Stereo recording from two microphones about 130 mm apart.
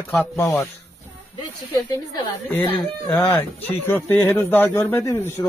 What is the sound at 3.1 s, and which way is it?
Speech, 20° left (ahead or behind).